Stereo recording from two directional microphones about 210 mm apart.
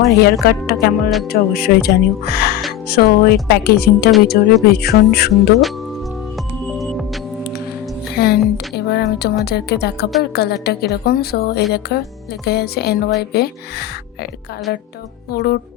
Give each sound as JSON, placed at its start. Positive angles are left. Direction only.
{"t": 0.1, "sound": "speech", "side_deg": 50}
{"t": 5.3, "sound": "music", "side_deg": 0}
{"t": 8.1, "sound": "a sound", "side_deg": 50}
{"t": 9.4, "sound": "speech", "side_deg": 50}